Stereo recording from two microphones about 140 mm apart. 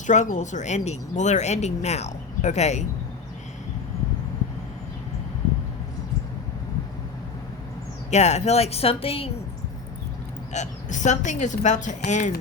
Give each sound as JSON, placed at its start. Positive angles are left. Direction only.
{"t": 0.1, "sound": "speech", "side_deg": 60}
{"t": 8.1, "sound": "speech", "side_deg": 55}
{"t": 10.5, "sound": "speech", "side_deg": 60}